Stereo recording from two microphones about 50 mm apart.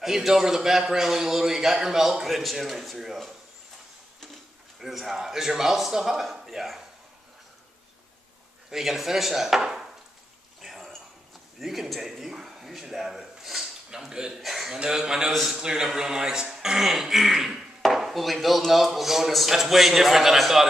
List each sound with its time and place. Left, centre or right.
0.0 s a man's voice: centre
4.7 s a man's voice: centre
8.6 s a man's voice: centre
10.6 s a sound: centre
11.6 s a man's voice: centre